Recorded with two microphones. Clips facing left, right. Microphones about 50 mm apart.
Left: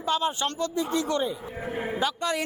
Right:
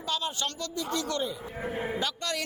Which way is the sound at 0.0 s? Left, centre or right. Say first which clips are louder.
Left 6 dB; left.